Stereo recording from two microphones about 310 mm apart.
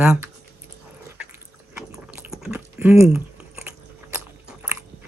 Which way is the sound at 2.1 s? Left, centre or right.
Centre.